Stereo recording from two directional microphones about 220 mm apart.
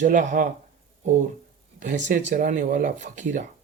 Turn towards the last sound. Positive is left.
turn(degrees=-35)  # may be behind; listen again after turning